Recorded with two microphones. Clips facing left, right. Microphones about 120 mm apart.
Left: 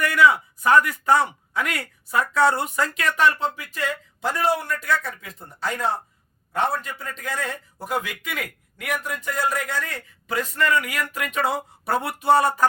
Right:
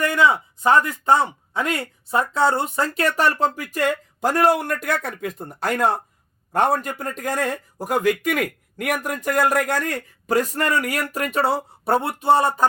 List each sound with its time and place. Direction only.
0.0 s speech: 25° right (ahead or behind)